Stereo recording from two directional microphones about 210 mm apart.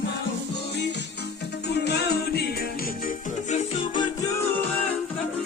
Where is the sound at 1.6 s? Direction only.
50° left (ahead or behind).